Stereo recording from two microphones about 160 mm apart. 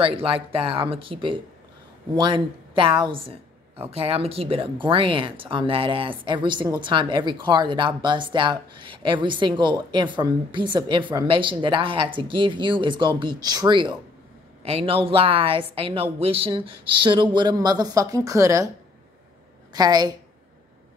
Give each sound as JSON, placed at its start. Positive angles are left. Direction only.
{"t": 0.0, "sound": "a woman's voice", "side_deg": -35}
{"t": 14.6, "sound": "speech", "side_deg": -40}
{"t": 19.7, "sound": "a woman's voice", "side_deg": -25}